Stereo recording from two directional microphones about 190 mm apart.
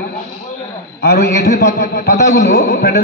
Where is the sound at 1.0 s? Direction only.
60° left (ahead or behind).